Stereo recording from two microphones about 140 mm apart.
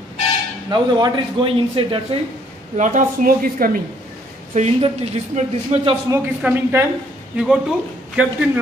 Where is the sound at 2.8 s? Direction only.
65° right (ahead or behind); by 3.8 s 90° right.